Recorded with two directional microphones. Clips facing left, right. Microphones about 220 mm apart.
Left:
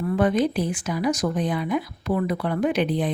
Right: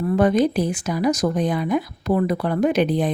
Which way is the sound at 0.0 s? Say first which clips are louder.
Right 3 dB; 40° right (ahead or behind).